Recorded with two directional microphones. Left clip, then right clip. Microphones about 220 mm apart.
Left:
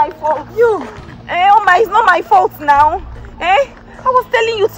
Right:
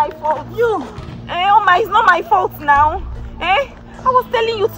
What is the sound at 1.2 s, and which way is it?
A woman's voice, 35° left (ahead or behind).